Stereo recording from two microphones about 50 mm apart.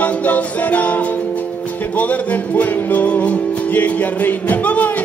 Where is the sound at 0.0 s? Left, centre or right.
Left.